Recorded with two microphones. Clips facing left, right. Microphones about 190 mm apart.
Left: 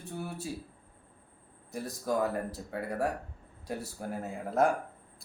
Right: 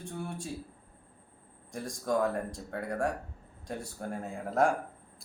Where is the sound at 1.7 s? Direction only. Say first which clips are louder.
Right 1 dB; 5° left (ahead or behind).